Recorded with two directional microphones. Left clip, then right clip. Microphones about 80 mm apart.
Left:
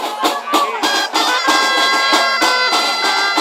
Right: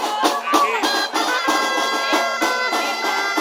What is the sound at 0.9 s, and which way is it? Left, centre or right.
Music, left.